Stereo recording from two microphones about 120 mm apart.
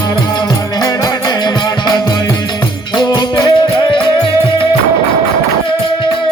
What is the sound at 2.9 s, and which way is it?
Music, 35° left (ahead or behind).